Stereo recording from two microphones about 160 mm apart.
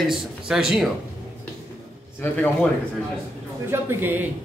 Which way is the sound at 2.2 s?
10° left (ahead or behind).